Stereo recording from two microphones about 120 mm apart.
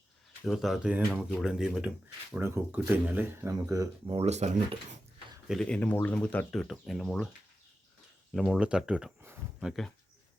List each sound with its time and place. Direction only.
0.4 s speech: centre (ahead or behind)
2.4 s speech: 20° right (ahead or behind)
3.5 s speech: 30° right (ahead or behind)
4.1 s speech: 60° right (ahead or behind)
5.5 s speech: 5° left (ahead or behind)
8.3 s speech: 5° right (ahead or behind)